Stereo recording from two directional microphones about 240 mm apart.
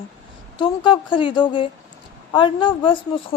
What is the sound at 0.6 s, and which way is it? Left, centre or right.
A woman's voice, left.